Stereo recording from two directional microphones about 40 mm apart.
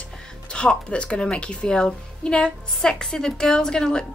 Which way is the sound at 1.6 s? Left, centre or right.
Centre.